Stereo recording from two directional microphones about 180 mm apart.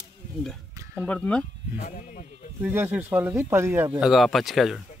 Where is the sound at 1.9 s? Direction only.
45° left (ahead or behind).